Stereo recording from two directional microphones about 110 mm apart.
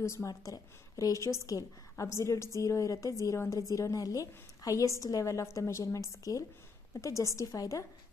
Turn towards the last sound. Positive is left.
turn(degrees=30)  # may be behind; listen again after turning